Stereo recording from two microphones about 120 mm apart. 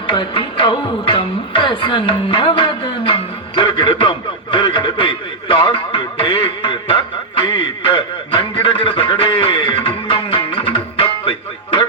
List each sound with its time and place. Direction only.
0.1 s music: 45° left (ahead or behind)